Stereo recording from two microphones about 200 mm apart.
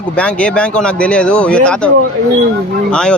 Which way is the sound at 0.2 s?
5° left (ahead or behind).